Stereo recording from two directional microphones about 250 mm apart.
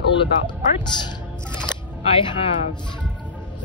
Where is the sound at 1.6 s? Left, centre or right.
Centre.